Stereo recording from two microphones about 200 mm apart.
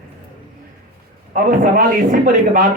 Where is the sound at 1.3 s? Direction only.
45° right (ahead or behind).